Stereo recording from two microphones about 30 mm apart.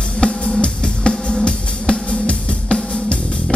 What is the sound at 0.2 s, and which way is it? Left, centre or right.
Music, left.